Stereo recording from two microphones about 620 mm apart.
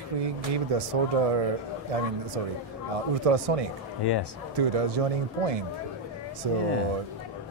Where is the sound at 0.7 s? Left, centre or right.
Right.